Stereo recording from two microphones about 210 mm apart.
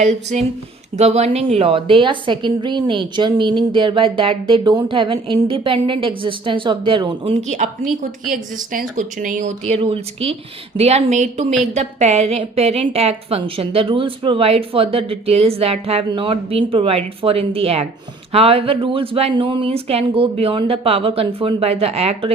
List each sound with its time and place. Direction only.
0.0 s a woman's voice: 30° right (ahead or behind)
7.4 s a woman's voice: 35° right (ahead or behind)